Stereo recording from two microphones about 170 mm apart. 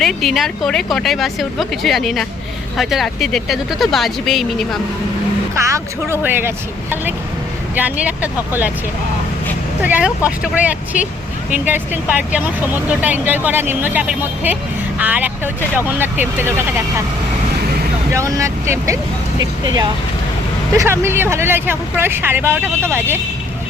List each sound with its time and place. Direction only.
0.0 s a woman's voice: centre (ahead or behind)
5.6 s speech: 15° right (ahead or behind)
7.8 s speech: 10° right (ahead or behind)
9.8 s speech: 5° right (ahead or behind)
18.1 s speech: 20° right (ahead or behind)